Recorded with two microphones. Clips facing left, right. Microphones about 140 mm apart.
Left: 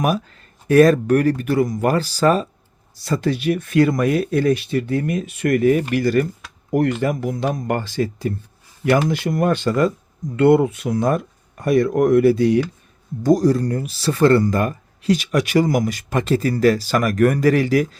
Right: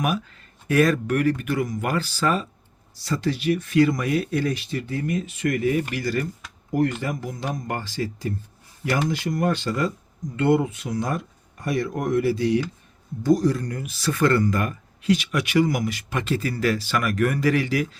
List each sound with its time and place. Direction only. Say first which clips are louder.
0.0 s speech: left 5 dB; 35° left (ahead or behind)
3.0 s speech: left 4 dB; 50° left (ahead or behind)
13.2 s speech: left 5 dB; 40° left (ahead or behind)